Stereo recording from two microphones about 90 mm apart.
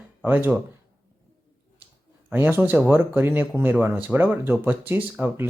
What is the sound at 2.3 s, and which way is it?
Speech, 20° right (ahead or behind).